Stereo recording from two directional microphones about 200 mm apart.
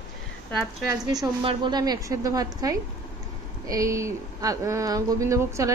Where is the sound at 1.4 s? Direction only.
20° right (ahead or behind).